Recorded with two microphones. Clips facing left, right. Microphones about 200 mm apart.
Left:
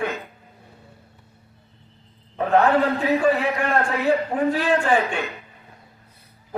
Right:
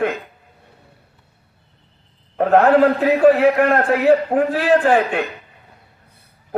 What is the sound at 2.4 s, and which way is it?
A man's voice, 60° right (ahead or behind).